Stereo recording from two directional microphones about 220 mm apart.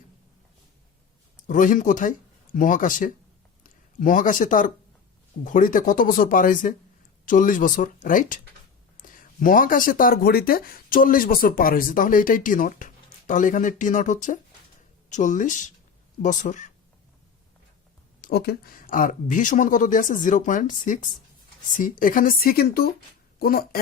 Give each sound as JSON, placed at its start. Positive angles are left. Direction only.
{"t": 1.5, "sound": "speech", "side_deg": 35}
{"t": 18.2, "sound": "speech", "side_deg": 45}